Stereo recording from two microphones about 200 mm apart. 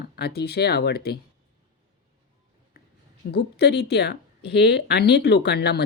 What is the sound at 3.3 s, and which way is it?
Speech, 55° left (ahead or behind).